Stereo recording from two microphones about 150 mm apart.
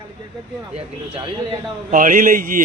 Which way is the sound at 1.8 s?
65° right (ahead or behind).